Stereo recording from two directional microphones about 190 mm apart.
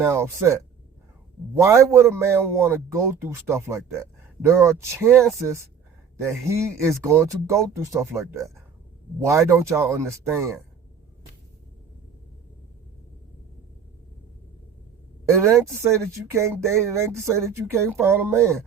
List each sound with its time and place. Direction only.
0.0 s a man's voice: 15° right (ahead or behind)
15.3 s a man's voice: 15° right (ahead or behind)